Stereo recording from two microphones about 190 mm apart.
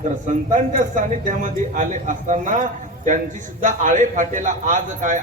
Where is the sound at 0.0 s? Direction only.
40° right (ahead or behind).